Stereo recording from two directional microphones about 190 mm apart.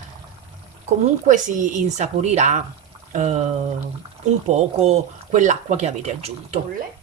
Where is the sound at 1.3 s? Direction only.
45° right (ahead or behind).